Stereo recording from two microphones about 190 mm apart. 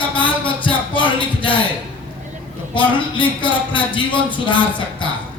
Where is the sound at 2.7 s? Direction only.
25° left (ahead or behind).